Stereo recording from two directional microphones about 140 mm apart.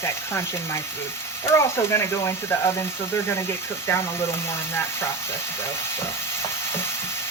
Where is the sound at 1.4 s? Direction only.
20° left (ahead or behind).